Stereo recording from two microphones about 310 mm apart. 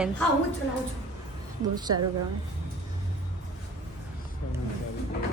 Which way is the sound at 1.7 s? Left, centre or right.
Centre.